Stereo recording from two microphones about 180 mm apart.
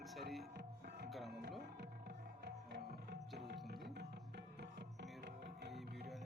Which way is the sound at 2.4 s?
65° right (ahead or behind).